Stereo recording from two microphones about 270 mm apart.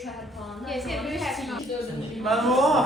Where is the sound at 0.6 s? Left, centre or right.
Centre.